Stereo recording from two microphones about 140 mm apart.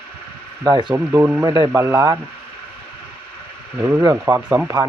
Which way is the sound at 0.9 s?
15° right (ahead or behind).